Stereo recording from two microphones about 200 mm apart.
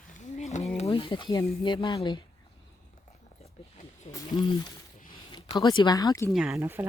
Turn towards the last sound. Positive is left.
turn(degrees=-10)  # may be behind; listen again after turning